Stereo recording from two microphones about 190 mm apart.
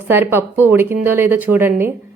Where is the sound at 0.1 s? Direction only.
10° right (ahead or behind).